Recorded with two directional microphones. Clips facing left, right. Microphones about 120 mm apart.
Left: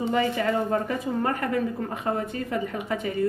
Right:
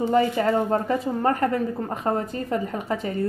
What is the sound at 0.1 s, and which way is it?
A woman's voice, 35° right (ahead or behind).